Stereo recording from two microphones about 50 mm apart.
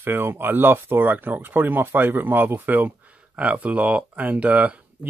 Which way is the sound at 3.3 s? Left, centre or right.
Right.